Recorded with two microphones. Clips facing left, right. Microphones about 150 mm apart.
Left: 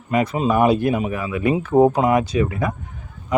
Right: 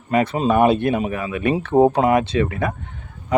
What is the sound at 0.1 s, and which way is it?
Speech, 30° right (ahead or behind).